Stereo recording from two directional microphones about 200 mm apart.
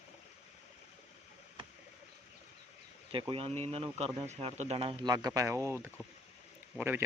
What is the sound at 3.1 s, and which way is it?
A man's voice, 25° right (ahead or behind).